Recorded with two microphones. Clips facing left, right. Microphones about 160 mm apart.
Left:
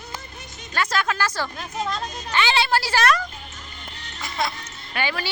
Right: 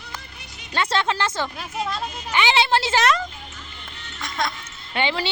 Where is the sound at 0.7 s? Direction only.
25° right (ahead or behind).